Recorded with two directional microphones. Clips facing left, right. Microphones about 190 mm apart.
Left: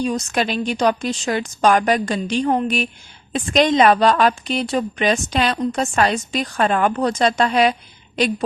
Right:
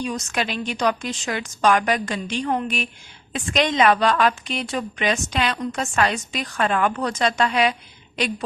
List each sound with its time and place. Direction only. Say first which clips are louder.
0.0 s a woman's voice: left 5 dB; 35° left (ahead or behind)